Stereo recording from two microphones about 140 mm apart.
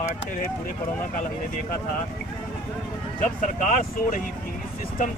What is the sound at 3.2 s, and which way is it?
Speech, 70° left (ahead or behind).